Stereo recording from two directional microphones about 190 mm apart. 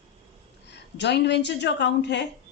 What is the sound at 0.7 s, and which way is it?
A woman's voice, 65° left (ahead or behind).